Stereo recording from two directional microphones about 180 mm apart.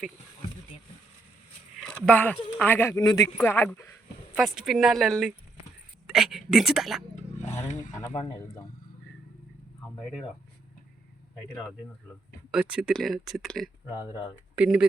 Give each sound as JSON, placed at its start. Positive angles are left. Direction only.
{"t": 1.8, "sound": "speech", "side_deg": 5}
{"t": 4.4, "sound": "speech", "side_deg": 0}
{"t": 7.3, "sound": "a sound", "side_deg": 40}
{"t": 7.7, "sound": "speech", "side_deg": 45}
{"t": 12.5, "sound": "speech", "side_deg": -5}
{"t": 14.1, "sound": "speech", "side_deg": 25}
{"t": 14.5, "sound": "speech", "side_deg": -5}